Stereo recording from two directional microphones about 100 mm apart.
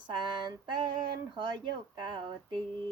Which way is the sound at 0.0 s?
50° right (ahead or behind).